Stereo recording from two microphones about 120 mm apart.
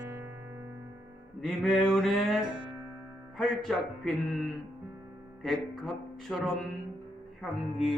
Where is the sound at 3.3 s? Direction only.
5° left (ahead or behind).